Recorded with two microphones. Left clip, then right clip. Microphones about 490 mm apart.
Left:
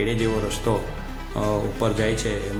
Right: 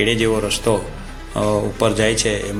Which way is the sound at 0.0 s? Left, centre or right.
Left.